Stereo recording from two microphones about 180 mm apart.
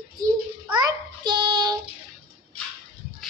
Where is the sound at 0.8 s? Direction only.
25° right (ahead or behind).